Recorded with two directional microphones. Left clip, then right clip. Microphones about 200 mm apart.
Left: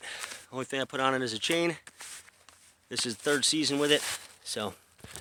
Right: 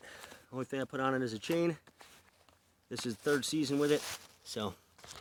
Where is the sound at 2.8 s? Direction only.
40° right (ahead or behind).